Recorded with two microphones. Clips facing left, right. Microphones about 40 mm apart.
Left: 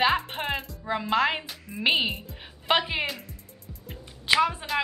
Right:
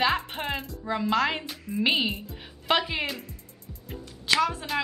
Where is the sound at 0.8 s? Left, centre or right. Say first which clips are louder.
Left 1 dB; centre.